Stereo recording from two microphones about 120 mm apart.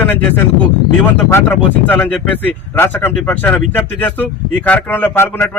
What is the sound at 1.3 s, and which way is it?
A man's voice, 15° left (ahead or behind).